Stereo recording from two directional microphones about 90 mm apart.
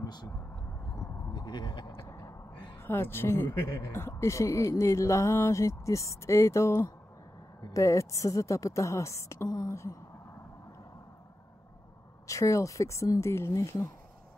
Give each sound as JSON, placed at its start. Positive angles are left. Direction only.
{"t": 0.0, "sound": "a sound", "side_deg": 50}
{"t": 2.0, "sound": "gasp", "side_deg": 35}
{"t": 2.8, "sound": "speech", "side_deg": 25}
{"t": 7.7, "sound": "a woman's voice", "side_deg": 35}
{"t": 12.3, "sound": "speech", "side_deg": 35}